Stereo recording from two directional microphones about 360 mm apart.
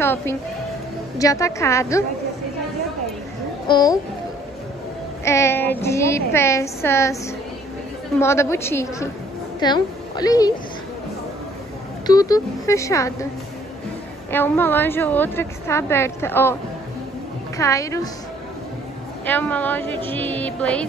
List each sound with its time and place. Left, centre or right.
0.0 s speech: centre
3.6 s speech: centre
5.2 s speech: centre
8.2 s a woman's voice: centre
12.1 s speech: centre
14.3 s a woman's voice: centre
17.6 s speech: centre
19.2 s a woman's voice: centre